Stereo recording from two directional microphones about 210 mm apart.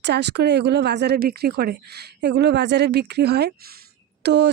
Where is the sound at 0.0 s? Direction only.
55° right (ahead or behind).